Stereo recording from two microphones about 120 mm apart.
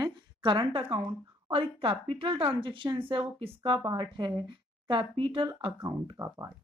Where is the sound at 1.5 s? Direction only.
50° right (ahead or behind).